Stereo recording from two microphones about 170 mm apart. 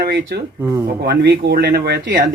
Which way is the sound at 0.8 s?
70° right (ahead or behind).